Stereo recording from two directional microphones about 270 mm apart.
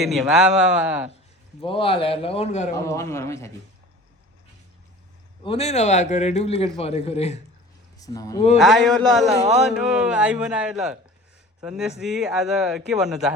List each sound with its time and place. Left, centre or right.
0.0 s speech: centre
1.6 s a man's voice: centre
2.7 s speech: centre
5.4 s a man's voice: left
7.9 s speech: centre
8.5 s speech: centre